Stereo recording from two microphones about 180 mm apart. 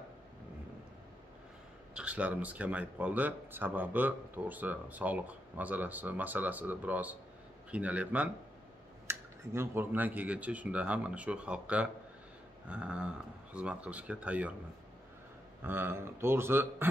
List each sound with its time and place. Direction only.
2.0 s speech: 5° right (ahead or behind)
15.6 s speech: 10° right (ahead or behind)